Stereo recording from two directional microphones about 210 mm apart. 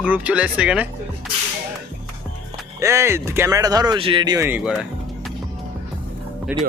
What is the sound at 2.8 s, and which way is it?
Speech, 15° right (ahead or behind).